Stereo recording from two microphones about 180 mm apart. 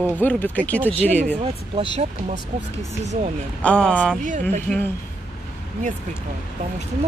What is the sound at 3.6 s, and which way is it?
Speech, 5° left (ahead or behind).